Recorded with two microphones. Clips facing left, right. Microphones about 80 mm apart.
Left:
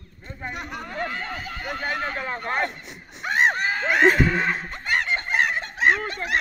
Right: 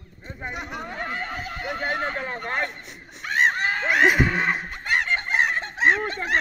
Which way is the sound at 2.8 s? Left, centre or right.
Centre.